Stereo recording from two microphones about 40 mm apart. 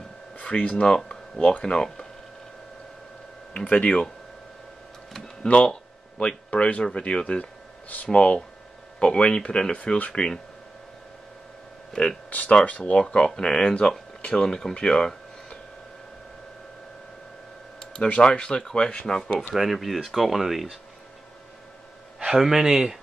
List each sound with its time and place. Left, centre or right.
0.4 s speech: left
3.6 s speech: left
5.4 s speech: left
5.7 s a sound: left
6.8 s speech: left
7.9 s speech: left
9.0 s speech: left
12.3 s speech: left; by 15.6 s centre
18.2 s speech: centre
19.5 s speech: centre
22.2 s a man's voice: centre